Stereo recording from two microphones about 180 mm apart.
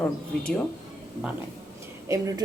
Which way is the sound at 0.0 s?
5° left (ahead or behind).